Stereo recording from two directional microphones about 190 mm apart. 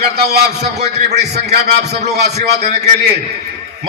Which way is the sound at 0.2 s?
60° right (ahead or behind).